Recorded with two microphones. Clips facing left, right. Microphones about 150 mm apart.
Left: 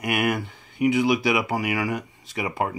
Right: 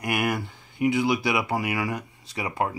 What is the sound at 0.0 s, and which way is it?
Speech, centre (ahead or behind).